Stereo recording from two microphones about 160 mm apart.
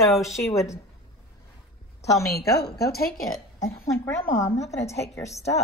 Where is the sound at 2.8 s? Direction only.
75° left (ahead or behind).